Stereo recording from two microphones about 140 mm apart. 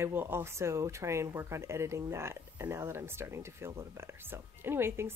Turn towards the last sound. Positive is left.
turn(degrees=-15)  # may be behind; listen again after turning